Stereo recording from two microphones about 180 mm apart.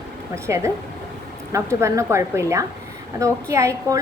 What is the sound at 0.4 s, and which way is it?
A woman's voice, 15° right (ahead or behind).